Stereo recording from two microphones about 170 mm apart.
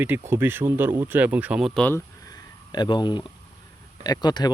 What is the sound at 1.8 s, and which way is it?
Speech, 10° left (ahead or behind).